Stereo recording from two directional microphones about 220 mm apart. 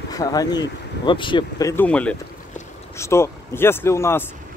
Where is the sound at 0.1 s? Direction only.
15° left (ahead or behind).